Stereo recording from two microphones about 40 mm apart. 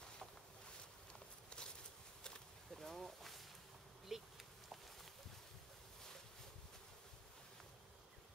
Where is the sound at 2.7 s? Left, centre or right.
Centre.